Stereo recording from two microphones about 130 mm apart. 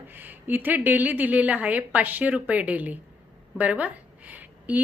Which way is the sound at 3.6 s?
10° right (ahead or behind).